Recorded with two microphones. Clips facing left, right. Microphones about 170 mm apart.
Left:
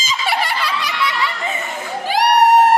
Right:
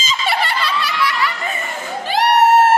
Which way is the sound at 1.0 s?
20° left (ahead or behind).